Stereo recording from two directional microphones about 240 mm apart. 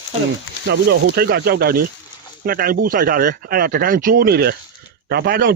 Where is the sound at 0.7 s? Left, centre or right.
Right.